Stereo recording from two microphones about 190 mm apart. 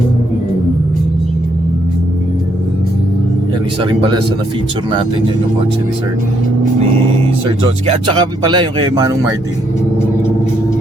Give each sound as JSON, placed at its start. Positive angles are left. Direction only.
{"t": 3.8, "sound": "speech", "side_deg": -25}
{"t": 7.9, "sound": "speech", "side_deg": -25}